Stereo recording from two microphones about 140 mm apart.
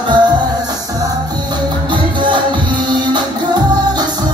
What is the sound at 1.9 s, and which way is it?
Music, 35° right (ahead or behind).